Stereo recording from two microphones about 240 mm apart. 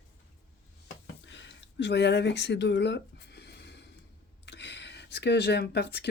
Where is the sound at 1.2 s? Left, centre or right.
Left.